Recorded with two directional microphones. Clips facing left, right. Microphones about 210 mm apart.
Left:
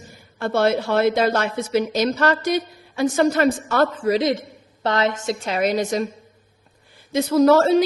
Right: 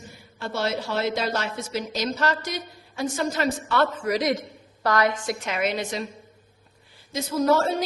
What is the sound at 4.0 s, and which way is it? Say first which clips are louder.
A woman's voice: left 5 dB; 25° left (ahead or behind).